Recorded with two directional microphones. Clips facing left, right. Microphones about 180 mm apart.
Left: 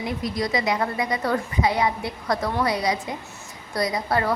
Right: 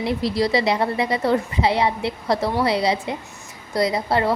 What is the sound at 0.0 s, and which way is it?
A woman's voice, 30° right (ahead or behind).